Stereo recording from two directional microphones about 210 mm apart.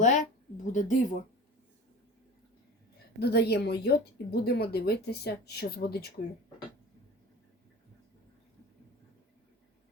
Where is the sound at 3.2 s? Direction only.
50° left (ahead or behind).